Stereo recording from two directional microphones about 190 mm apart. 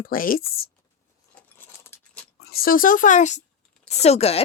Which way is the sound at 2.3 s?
55° left (ahead or behind).